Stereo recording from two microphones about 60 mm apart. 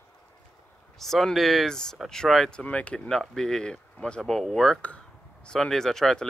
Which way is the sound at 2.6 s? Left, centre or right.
Left.